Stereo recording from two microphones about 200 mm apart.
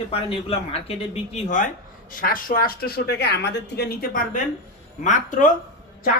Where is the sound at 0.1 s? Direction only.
30° left (ahead or behind).